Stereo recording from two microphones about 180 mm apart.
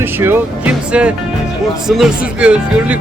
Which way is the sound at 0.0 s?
10° right (ahead or behind).